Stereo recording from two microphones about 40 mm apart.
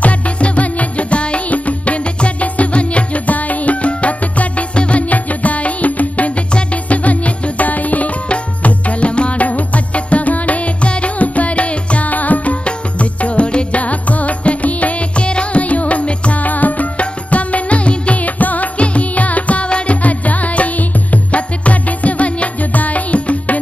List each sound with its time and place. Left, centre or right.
0.0 s music: left
12.1 s music: left